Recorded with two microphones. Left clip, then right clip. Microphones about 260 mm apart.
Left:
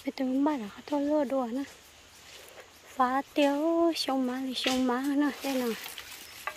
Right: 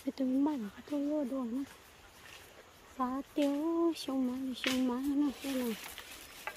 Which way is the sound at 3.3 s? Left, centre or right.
Centre.